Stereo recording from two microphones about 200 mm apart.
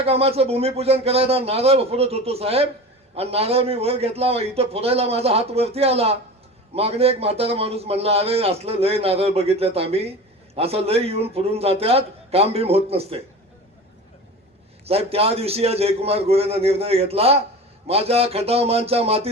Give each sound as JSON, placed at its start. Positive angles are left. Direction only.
{"t": 0.0, "sound": "a man's voice", "side_deg": -30}
{"t": 14.8, "sound": "a man's voice", "side_deg": -30}